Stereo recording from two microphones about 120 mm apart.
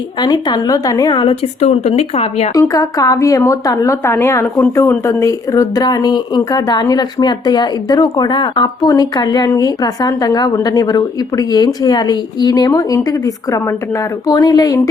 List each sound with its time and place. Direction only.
0.2 s speech: 35° left (ahead or behind); by 2.5 s 60° left (ahead or behind)
2.5 s a woman's voice: 30° left (ahead or behind)